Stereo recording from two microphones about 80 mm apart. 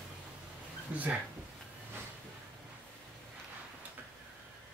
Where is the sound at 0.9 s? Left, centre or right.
Centre.